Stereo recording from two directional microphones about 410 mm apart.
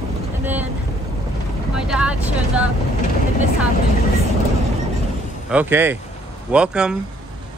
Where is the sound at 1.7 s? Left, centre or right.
Centre.